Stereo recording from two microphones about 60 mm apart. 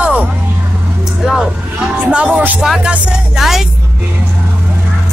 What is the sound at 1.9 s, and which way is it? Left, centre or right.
Music, centre.